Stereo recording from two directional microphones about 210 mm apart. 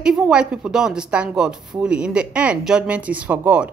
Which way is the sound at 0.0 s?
5° right (ahead or behind).